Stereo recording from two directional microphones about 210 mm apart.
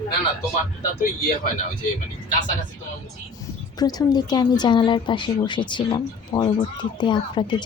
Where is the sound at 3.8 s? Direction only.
20° left (ahead or behind).